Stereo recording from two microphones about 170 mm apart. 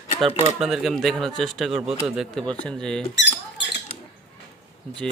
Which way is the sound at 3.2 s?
90° left.